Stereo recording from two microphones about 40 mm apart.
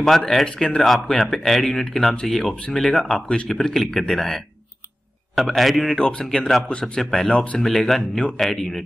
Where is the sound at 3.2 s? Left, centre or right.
Left.